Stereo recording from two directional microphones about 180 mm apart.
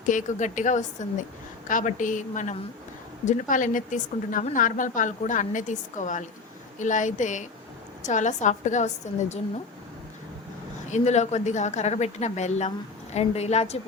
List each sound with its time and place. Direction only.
0.0 s a woman's voice: 45° left (ahead or behind)
10.8 s a woman's voice: 40° left (ahead or behind)